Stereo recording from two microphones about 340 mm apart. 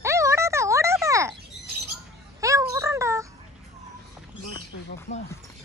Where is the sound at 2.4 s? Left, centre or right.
Centre.